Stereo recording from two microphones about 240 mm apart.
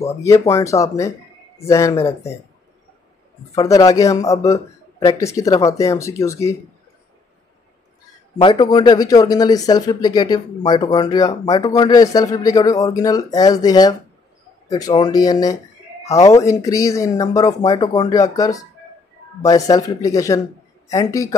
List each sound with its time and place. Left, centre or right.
0.2 s speech: centre
3.5 s speech: centre
8.4 s speech: centre